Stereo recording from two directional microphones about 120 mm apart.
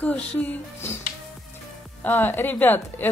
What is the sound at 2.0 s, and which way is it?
A woman's voice, 15° left (ahead or behind).